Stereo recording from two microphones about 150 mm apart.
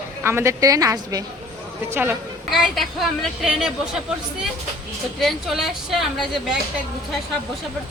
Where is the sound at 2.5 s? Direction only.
Centre (ahead or behind).